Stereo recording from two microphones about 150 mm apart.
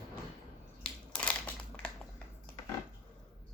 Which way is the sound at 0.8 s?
5° left (ahead or behind).